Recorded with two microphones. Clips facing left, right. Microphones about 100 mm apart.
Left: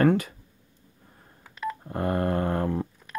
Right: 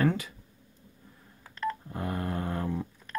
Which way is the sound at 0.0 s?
55° left (ahead or behind).